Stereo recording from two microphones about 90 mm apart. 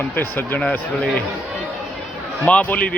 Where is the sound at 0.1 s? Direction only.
20° left (ahead or behind).